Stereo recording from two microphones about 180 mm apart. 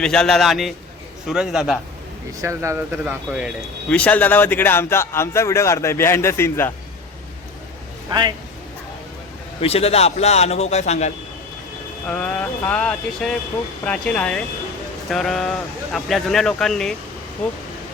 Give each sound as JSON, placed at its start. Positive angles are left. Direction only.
{"t": 0.0, "sound": "speech", "side_deg": 5}
{"t": 2.4, "sound": "speech", "side_deg": -15}
{"t": 3.8, "sound": "a man's voice", "side_deg": 5}
{"t": 8.1, "sound": "speech", "side_deg": -25}
{"t": 9.6, "sound": "a man's voice", "side_deg": 35}
{"t": 12.0, "sound": "a man's voice", "side_deg": 5}